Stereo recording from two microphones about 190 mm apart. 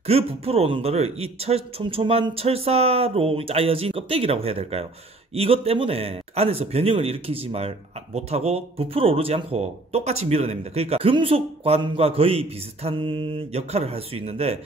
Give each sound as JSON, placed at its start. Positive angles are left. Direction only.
{"t": 0.0, "sound": "speech", "side_deg": -30}